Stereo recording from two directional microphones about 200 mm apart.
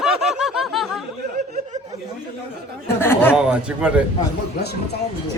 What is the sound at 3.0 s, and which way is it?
Chatter, 10° left (ahead or behind).